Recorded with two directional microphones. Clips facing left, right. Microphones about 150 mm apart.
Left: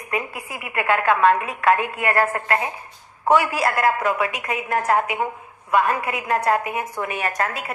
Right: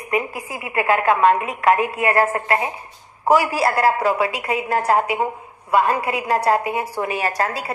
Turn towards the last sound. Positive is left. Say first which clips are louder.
# right 2 dB
turn(degrees=-35)  # may be behind; listen again after turning